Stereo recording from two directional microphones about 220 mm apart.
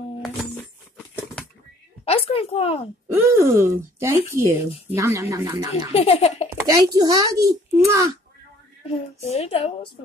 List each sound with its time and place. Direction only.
2.0 s a woman's voice: 25° left (ahead or behind)
3.1 s speech: 10° right (ahead or behind)
5.9 s speech: 25° left (ahead or behind)
6.9 s speech: 15° right (ahead or behind)
8.8 s a woman's voice: 30° left (ahead or behind)